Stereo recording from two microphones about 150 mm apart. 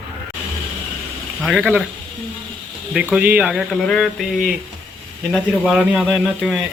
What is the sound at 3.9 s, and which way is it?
Speech, centre (ahead or behind).